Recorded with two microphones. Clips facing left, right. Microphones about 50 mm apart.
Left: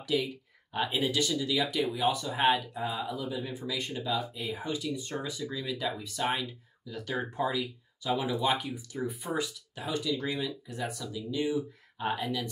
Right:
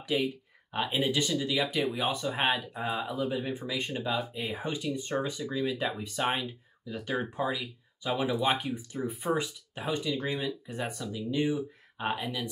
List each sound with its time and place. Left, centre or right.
0.0 s speech: right
2.4 s speech: centre
2.7 s speech: right
12.1 s speech: centre